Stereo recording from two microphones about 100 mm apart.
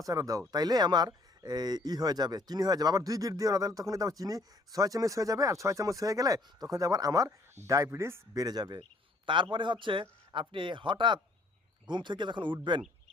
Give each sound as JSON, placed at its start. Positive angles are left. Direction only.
{"t": 0.0, "sound": "speech", "side_deg": -35}
{"t": 8.4, "sound": "speech", "side_deg": -45}